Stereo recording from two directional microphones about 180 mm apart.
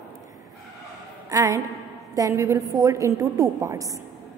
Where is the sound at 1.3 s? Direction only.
15° right (ahead or behind).